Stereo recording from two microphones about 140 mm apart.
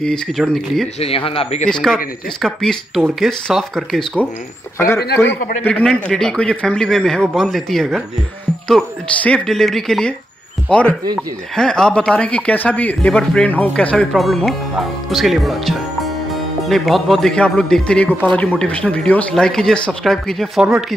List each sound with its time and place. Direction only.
0.0 s speech: 5° left (ahead or behind)
0.9 s speech: 45° left (ahead or behind)
1.7 s speech: 5° left (ahead or behind)
4.7 s speech: 20° left (ahead or behind); by 20.6 s centre (ahead or behind)